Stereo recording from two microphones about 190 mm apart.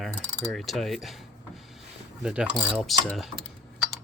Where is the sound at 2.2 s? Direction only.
5° right (ahead or behind).